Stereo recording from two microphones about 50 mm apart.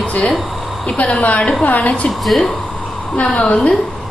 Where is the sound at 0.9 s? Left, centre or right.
Left.